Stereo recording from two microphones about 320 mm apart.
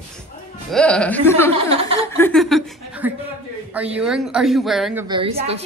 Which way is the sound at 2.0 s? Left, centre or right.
Centre.